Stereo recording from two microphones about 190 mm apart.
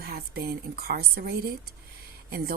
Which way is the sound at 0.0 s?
55° right (ahead or behind).